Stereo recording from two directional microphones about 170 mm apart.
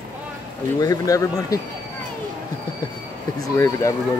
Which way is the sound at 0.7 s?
20° left (ahead or behind).